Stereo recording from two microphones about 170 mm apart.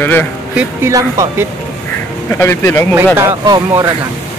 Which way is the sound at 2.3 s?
15° left (ahead or behind).